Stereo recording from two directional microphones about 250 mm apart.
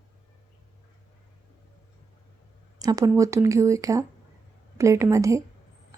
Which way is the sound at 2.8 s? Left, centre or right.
Centre.